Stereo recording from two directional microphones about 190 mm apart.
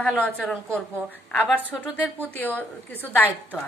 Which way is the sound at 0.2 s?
5° left (ahead or behind).